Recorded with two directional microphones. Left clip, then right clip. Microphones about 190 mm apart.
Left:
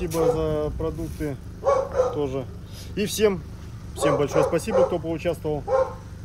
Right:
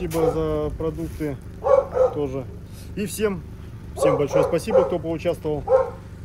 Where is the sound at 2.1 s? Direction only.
20° left (ahead or behind).